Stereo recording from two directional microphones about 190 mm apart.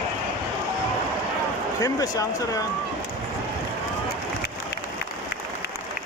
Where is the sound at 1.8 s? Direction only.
20° left (ahead or behind).